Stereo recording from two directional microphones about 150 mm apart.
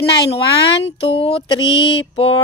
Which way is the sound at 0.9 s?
40° left (ahead or behind).